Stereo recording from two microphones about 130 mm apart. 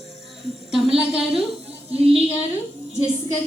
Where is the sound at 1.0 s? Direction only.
5° right (ahead or behind).